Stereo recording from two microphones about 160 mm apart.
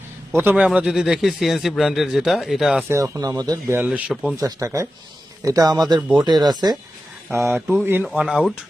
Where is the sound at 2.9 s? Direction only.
20° right (ahead or behind); by 4.4 s centre (ahead or behind).